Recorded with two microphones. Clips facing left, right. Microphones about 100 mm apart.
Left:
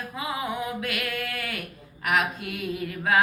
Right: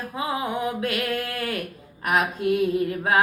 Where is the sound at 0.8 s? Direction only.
30° right (ahead or behind).